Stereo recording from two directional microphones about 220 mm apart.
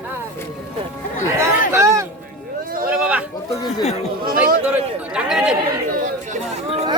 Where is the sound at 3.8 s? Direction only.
30° left (ahead or behind).